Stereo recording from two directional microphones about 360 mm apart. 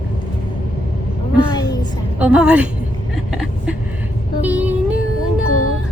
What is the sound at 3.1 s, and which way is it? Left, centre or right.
Vehicle, centre.